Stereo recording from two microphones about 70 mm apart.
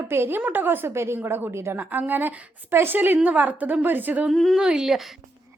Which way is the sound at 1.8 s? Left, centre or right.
Right.